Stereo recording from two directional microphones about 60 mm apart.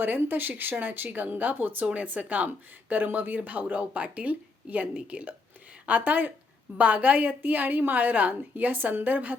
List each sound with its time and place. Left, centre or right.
0.0 s speech: right